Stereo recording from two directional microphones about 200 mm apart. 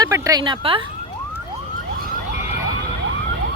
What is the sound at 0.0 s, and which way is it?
Speech, 20° right (ahead or behind).